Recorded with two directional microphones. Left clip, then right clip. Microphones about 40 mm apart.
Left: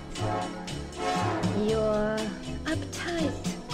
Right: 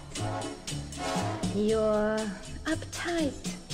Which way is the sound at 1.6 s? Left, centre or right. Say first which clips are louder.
Right 1 dB; right.